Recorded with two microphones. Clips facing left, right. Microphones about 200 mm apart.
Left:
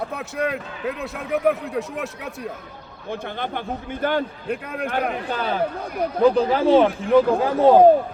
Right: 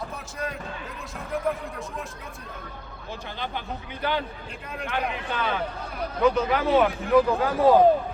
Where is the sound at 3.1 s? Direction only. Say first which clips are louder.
Left 6 dB; 55° left (ahead or behind).